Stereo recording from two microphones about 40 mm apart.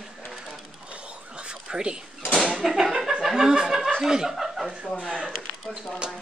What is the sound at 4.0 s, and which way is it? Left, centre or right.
Speech, centre.